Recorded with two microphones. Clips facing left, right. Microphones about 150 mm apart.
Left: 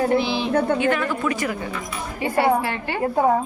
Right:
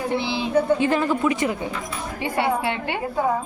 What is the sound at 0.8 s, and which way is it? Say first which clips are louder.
A woman's voice: right 1 dB; 30° right (ahead or behind).